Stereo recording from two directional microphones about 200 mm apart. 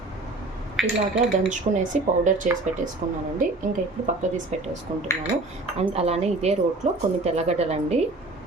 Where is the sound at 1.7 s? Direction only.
35° right (ahead or behind).